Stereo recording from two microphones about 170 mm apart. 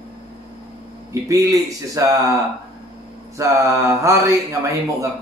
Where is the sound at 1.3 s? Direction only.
20° right (ahead or behind).